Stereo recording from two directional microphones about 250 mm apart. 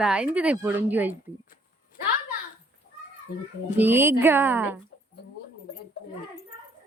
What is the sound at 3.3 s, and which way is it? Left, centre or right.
Speech, left.